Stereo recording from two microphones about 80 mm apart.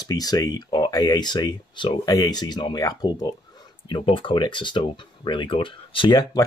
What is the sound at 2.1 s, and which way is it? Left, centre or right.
Speech, left.